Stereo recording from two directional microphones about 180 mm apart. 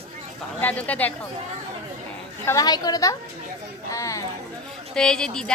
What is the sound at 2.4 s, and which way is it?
A woman's voice, 20° left (ahead or behind).